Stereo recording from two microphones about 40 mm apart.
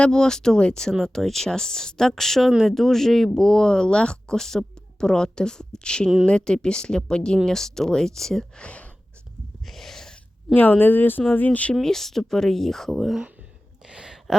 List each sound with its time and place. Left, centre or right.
0.1 s speech: centre
7.4 s speech: centre
8.5 s speech: left
9.6 s a sound: centre
10.5 s speech: left
11.3 s speech: left
11.7 s speech: centre
13.8 s a sound: right